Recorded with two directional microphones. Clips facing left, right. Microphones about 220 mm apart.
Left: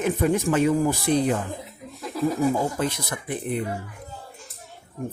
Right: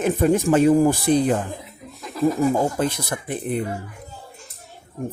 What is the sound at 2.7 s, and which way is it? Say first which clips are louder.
Speech: right 3 dB; 30° right (ahead or behind).